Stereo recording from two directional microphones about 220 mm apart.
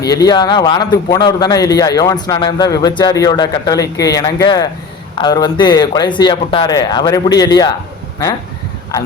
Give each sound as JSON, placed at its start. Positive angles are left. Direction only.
{"t": 0.1, "sound": "a man's voice", "side_deg": 15}